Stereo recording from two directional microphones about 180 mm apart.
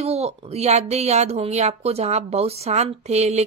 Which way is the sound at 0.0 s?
35° right (ahead or behind).